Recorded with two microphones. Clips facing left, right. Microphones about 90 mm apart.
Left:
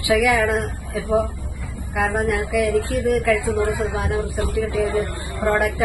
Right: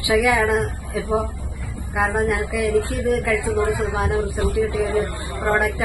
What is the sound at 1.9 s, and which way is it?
A woman's voice, 20° right (ahead or behind).